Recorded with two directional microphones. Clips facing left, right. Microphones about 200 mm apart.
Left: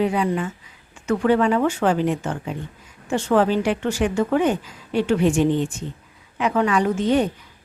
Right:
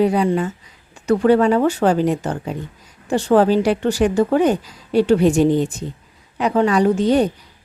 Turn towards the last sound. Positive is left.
turn(degrees=-35)  # may be behind; listen again after turning